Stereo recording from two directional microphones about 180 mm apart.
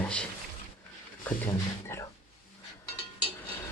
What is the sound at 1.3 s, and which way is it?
Speech, 10° left (ahead or behind).